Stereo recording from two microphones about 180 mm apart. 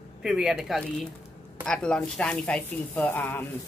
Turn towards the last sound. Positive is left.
turn(degrees=10)  # may be behind; listen again after turning